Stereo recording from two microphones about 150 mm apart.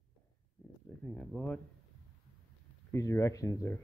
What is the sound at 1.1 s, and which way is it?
Speech, 5° left (ahead or behind).